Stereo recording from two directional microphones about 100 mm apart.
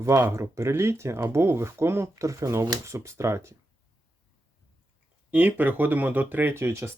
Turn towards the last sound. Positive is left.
turn(degrees=-25)  # may be behind; listen again after turning